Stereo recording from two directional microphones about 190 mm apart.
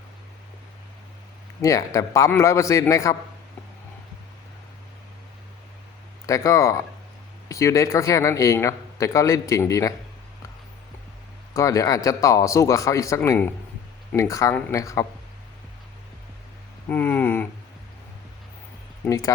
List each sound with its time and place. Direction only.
1.6 s speech: 15° left (ahead or behind)
6.2 s speech: 15° left (ahead or behind)
11.5 s speech: 15° left (ahead or behind)
16.9 s speech: 10° left (ahead or behind)
19.0 s speech: 15° left (ahead or behind)